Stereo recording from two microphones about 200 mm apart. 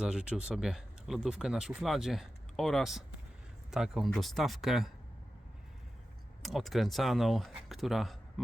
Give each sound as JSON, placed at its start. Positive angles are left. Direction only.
{"t": 0.0, "sound": "speech", "side_deg": -5}
{"t": 6.4, "sound": "speech", "side_deg": 0}